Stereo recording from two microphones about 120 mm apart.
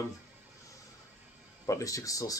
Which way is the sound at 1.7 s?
25° left (ahead or behind).